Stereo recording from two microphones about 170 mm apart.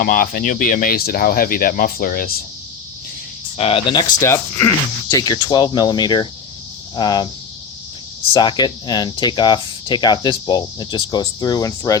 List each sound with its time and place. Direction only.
0.0 s speech: 55° left (ahead or behind)
3.6 s speech: 35° left (ahead or behind)
8.3 s speech: 25° left (ahead or behind)